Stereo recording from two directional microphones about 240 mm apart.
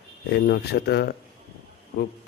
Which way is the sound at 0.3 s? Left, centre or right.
Left.